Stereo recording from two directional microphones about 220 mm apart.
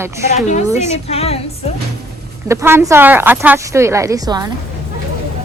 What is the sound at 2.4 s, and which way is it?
Speech, 10° right (ahead or behind).